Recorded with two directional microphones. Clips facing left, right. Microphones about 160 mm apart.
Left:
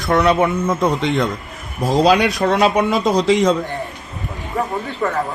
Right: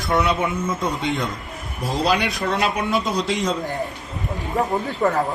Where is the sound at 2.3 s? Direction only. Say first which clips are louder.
Left 7 dB; 75° left (ahead or behind).